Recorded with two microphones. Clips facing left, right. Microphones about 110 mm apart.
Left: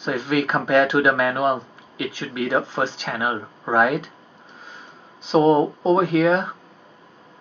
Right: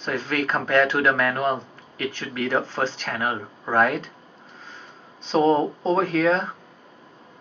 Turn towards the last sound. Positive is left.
turn(degrees=15)  # may be behind; listen again after turning